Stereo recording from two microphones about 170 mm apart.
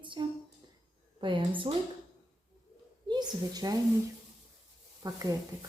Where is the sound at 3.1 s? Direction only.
25° right (ahead or behind).